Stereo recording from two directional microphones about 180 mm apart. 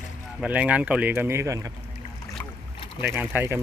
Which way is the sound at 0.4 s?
5° right (ahead or behind).